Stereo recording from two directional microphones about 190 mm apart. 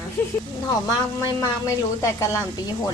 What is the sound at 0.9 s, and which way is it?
A woman's voice, 20° left (ahead or behind).